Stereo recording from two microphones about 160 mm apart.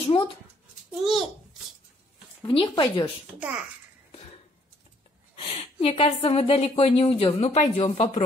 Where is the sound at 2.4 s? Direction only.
30° left (ahead or behind).